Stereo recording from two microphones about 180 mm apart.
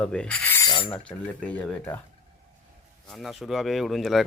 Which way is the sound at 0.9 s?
5° left (ahead or behind).